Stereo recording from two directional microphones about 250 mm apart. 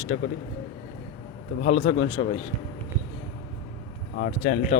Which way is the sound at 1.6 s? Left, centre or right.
Left.